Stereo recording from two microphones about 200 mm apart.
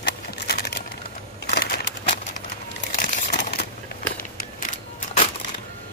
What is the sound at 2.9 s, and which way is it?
Crumpling, 50° left (ahead or behind).